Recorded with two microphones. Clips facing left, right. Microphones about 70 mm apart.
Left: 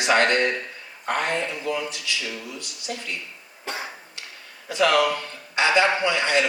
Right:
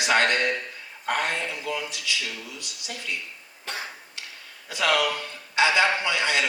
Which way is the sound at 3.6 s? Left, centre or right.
Centre.